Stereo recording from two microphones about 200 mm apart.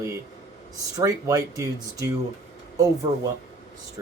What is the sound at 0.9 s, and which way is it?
Speech, 15° right (ahead or behind).